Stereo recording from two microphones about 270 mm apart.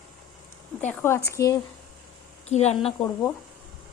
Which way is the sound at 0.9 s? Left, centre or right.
Centre.